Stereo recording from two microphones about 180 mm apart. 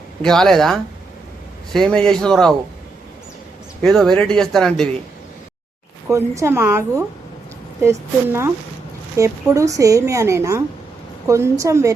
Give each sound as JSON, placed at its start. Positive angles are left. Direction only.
{"t": 0.2, "sound": "speech", "side_deg": 0}
{"t": 3.8, "sound": "speech", "side_deg": 0}
{"t": 6.1, "sound": "a woman's voice", "side_deg": -15}